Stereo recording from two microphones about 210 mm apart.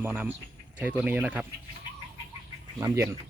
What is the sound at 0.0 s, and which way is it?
Speech, 10° right (ahead or behind).